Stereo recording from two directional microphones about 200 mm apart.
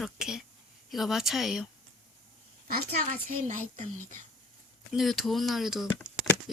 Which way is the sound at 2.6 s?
40° right (ahead or behind).